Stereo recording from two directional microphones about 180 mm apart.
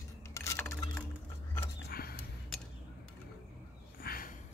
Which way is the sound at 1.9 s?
55° left (ahead or behind).